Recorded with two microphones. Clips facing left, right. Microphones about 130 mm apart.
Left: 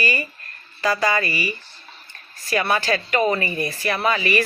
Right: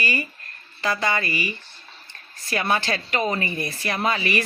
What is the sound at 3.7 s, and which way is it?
Speech, 35° right (ahead or behind).